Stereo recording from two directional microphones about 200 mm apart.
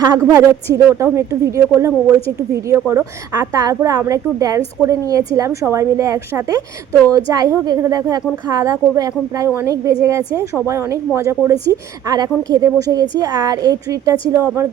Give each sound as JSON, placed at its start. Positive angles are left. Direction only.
{"t": 0.0, "sound": "a woman's voice", "side_deg": -20}